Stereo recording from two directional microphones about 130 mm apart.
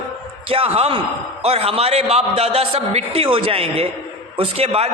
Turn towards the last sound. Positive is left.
turn(degrees=-50)  # may be behind; listen again after turning